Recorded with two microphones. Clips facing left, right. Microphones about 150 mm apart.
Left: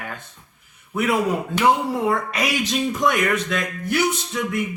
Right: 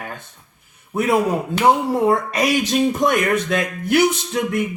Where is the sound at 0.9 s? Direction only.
25° right (ahead or behind).